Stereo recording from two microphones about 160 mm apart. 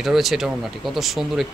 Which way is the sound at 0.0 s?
Centre (ahead or behind).